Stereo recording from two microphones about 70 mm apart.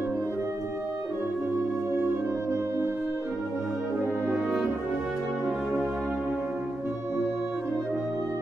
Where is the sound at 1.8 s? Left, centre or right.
Right.